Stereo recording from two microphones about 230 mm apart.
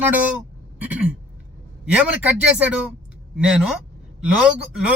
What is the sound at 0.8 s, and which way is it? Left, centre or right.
Throat clearing, centre.